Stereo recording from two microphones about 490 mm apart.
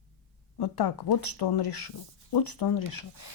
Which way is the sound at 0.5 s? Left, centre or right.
Left.